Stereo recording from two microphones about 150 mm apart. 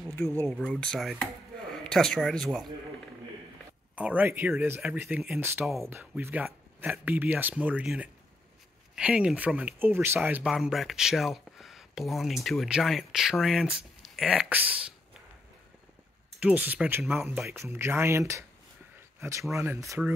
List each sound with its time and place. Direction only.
0.5 s speech: 5° left (ahead or behind)
3.9 s speech: 10° right (ahead or behind)
16.3 s speech: 10° right (ahead or behind)
19.1 s a sound: 20° right (ahead or behind)
19.5 s speech: 15° right (ahead or behind)